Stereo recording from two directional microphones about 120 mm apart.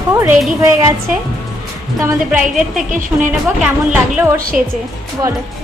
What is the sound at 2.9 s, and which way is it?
Speech, 90° right.